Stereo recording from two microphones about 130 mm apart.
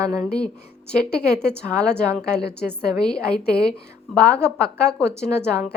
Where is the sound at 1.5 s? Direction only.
5° left (ahead or behind).